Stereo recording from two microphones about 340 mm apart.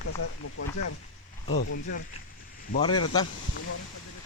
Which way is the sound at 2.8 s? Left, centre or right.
Centre.